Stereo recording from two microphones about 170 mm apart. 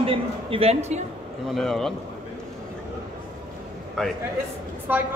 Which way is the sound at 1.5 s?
Centre (ahead or behind).